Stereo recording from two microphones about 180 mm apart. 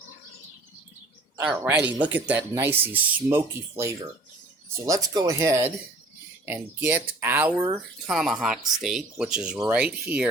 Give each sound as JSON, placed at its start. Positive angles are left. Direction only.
{"t": 1.4, "sound": "speech", "side_deg": -10}